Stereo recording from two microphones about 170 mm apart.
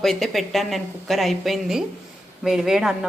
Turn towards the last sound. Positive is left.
turn(degrees=0)  # may be behind; listen again after turning